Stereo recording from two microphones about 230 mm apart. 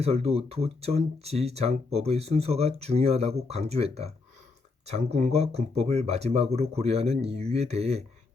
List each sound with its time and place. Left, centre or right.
0.0 s speech: right